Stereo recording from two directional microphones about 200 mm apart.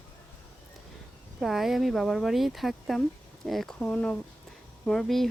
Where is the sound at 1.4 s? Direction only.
Centre (ahead or behind).